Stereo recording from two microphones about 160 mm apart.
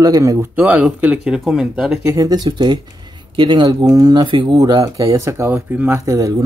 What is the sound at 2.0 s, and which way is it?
Speech, 20° right (ahead or behind).